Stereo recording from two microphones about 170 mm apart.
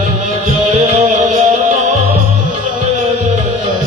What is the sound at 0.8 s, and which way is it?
Music, 45° right (ahead or behind).